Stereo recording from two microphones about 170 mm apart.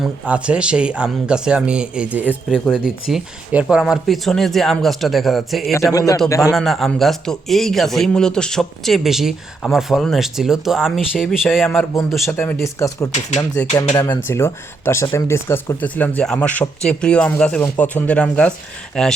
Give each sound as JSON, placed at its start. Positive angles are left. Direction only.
{"t": 0.0, "sound": "a man's voice", "side_deg": -5}
{"t": 5.9, "sound": "a man's voice", "side_deg": 20}
{"t": 6.5, "sound": "a man's voice", "side_deg": 0}
{"t": 11.6, "sound": "a man's voice", "side_deg": 10}